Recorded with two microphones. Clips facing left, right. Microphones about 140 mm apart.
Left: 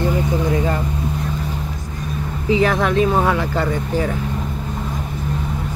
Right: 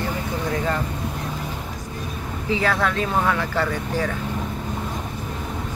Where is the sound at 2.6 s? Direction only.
20° left (ahead or behind).